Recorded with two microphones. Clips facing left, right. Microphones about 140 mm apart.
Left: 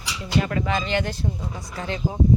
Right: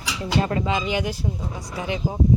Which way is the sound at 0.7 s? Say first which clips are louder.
Even; 10° right (ahead or behind).